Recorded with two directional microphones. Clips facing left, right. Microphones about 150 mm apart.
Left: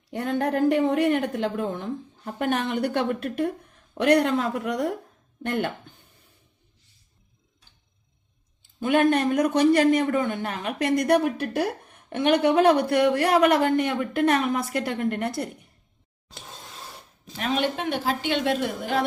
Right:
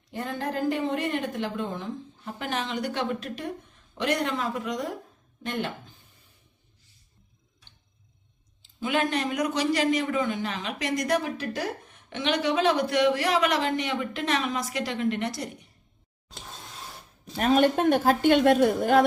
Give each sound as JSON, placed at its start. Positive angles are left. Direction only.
{"t": 0.1, "sound": "a woman's voice", "side_deg": 70}
{"t": 8.6, "sound": "a man's voice", "side_deg": 55}
{"t": 17.3, "sound": "a woman's voice", "side_deg": -45}